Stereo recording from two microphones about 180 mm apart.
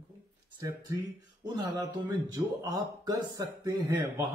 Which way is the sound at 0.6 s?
15° right (ahead or behind).